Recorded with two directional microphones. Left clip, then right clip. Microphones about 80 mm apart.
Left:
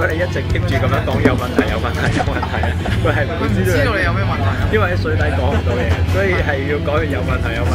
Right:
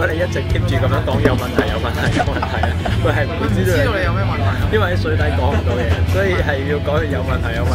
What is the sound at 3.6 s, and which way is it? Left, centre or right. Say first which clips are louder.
Speech: left 1 dB; centre.